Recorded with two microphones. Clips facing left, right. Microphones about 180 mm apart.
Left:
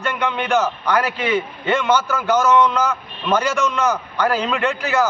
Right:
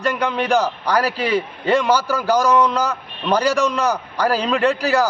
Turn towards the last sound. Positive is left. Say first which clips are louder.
# right 2 dB
turn(degrees=-35)  # may be behind; listen again after turning